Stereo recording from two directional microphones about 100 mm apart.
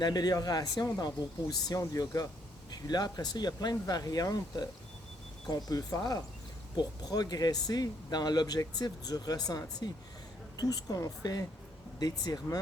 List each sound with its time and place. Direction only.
0.0 s speech: 40° left (ahead or behind)